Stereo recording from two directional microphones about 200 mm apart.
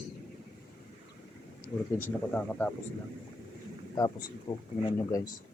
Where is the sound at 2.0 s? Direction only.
10° left (ahead or behind).